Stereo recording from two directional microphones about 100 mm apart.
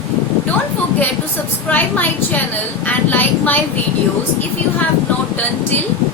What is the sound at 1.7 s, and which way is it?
A woman's voice, 15° left (ahead or behind).